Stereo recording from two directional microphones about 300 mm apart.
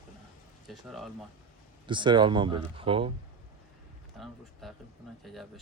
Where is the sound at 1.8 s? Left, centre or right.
Centre.